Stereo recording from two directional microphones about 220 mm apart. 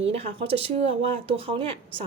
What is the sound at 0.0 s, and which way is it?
Speech, 25° right (ahead or behind).